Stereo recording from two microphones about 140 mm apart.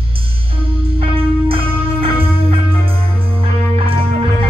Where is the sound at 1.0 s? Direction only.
40° right (ahead or behind).